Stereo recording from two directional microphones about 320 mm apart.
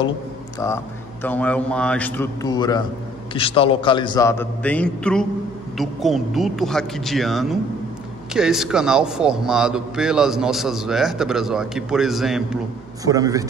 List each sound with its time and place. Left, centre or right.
0.6 s a man's voice: centre